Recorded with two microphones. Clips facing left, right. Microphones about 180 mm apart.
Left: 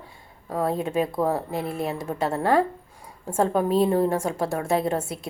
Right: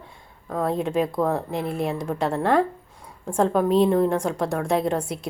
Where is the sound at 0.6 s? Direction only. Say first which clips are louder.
Right 2 dB; 5° left (ahead or behind).